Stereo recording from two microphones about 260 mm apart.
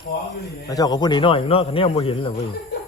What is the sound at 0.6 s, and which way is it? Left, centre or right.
Speech, centre.